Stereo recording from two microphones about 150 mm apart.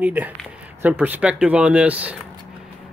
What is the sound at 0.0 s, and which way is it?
Speech, 10° right (ahead or behind).